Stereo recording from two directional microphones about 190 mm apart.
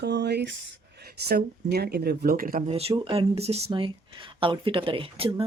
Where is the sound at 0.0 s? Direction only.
60° right (ahead or behind).